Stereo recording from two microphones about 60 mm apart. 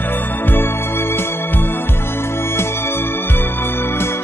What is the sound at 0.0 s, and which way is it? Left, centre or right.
Music, left.